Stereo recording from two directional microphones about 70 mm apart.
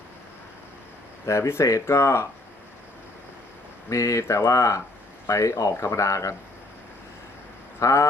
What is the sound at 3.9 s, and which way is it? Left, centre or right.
Speech, left.